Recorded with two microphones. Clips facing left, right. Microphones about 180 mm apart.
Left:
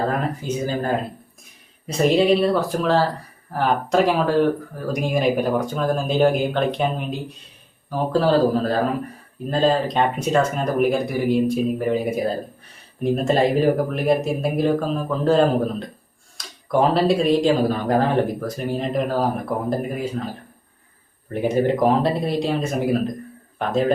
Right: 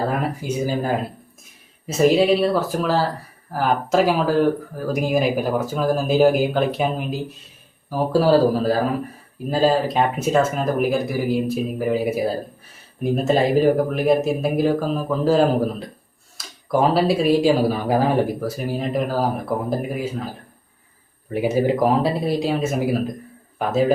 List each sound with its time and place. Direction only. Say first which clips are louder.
0.1 s speech: even; 10° right (ahead or behind)
21.3 s speech: even; 5° right (ahead or behind)